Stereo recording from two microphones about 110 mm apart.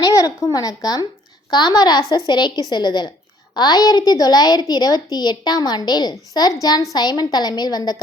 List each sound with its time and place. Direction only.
0.0 s a woman's voice: 35° left (ahead or behind)